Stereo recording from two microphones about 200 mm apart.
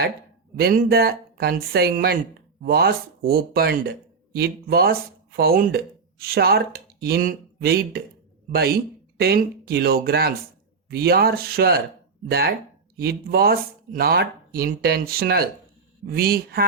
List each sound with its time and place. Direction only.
0.5 s speech: 50° right (ahead or behind)